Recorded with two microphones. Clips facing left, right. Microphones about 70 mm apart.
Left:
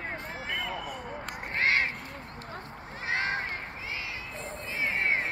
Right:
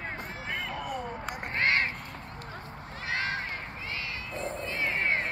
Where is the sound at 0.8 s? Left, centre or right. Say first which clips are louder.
Right 3 dB; centre.